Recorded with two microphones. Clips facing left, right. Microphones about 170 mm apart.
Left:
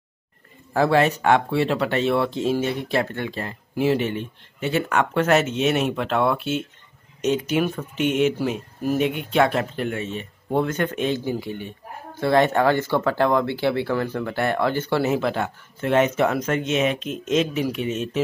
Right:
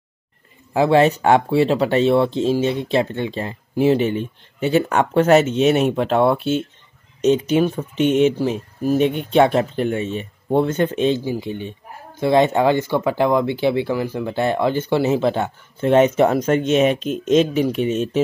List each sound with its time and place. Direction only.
0.7 s speech: 25° right (ahead or behind)
8.0 s speech: 5° left (ahead or behind)
9.3 s speech: 30° right (ahead or behind)
17.0 s speech: centre (ahead or behind)
17.3 s speech: 30° right (ahead or behind)